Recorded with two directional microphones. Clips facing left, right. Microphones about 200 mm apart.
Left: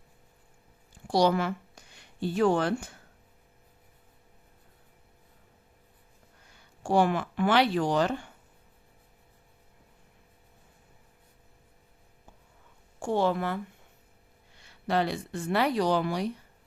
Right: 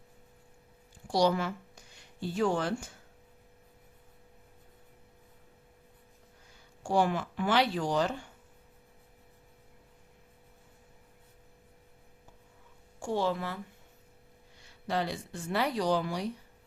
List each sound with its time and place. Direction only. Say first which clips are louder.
1.0 s a woman's voice: left 3 dB; 65° left (ahead or behind)
6.8 s speech: left 3 dB; 65° left (ahead or behind)
13.0 s speech: left 4 dB; 60° left (ahead or behind)
14.6 s speech: left 5 dB; 65° left (ahead or behind)